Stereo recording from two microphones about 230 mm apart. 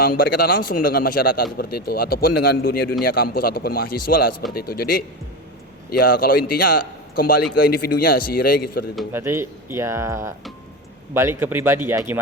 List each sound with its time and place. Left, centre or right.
0.0 s a man's voice: left
9.0 s speech: centre